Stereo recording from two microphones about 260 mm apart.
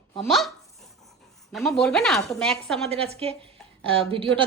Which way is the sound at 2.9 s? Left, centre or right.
Right.